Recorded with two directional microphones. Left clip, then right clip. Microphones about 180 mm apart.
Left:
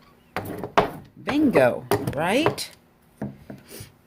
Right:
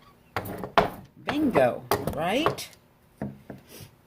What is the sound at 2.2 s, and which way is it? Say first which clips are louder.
Speech: left 6 dB; 55° left (ahead or behind).